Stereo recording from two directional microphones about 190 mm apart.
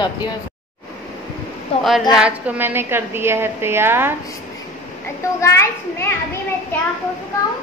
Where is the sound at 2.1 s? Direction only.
5° right (ahead or behind).